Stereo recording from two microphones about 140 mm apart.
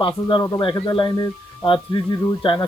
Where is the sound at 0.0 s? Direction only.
35° left (ahead or behind).